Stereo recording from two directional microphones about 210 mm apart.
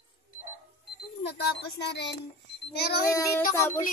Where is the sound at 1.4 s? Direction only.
55° left (ahead or behind).